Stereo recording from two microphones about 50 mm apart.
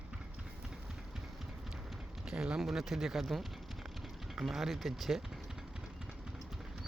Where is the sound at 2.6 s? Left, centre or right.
Centre.